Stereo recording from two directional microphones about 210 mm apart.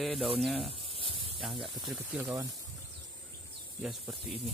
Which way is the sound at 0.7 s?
25° right (ahead or behind).